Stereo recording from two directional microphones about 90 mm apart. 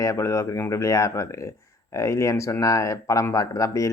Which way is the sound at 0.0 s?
35° left (ahead or behind).